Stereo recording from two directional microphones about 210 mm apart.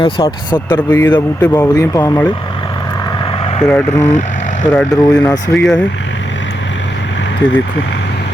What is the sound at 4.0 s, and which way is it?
Vehicle, 35° left (ahead or behind).